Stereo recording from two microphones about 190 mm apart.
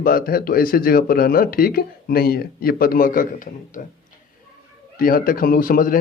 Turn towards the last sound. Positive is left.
turn(degrees=50)  # may be behind; listen again after turning